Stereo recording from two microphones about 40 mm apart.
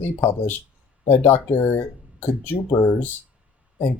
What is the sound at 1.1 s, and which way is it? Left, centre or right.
Speech, left.